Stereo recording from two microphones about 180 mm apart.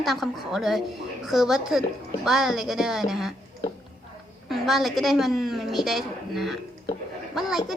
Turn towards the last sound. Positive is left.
turn(degrees=0)  # may be behind; listen again after turning